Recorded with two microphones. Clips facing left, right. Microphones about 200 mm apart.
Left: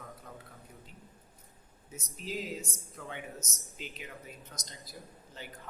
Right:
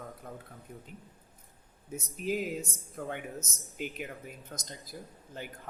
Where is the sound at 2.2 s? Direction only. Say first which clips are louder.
Right 6 dB; 55° right (ahead or behind).